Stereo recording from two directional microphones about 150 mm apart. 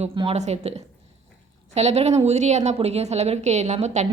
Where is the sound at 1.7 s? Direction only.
45° right (ahead or behind).